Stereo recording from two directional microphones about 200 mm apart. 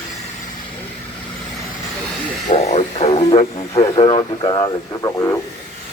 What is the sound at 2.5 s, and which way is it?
Radio, 30° left (ahead or behind).